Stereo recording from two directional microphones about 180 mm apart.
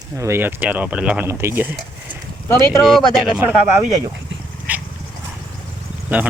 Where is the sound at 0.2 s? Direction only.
15° right (ahead or behind).